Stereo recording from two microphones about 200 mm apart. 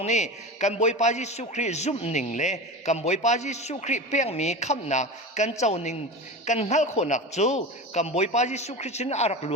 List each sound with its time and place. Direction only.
0.0 s a man's voice: 35° left (ahead or behind)